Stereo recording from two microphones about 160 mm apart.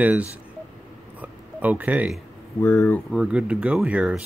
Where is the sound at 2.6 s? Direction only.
15° left (ahead or behind).